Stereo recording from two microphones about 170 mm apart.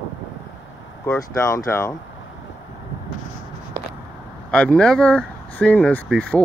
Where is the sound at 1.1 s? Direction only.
15° left (ahead or behind).